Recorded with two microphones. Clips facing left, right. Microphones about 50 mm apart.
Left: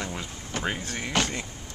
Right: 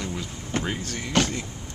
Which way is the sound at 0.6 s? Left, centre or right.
Centre.